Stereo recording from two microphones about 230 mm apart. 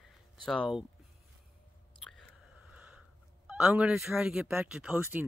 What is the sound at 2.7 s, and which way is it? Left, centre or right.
Speech, centre.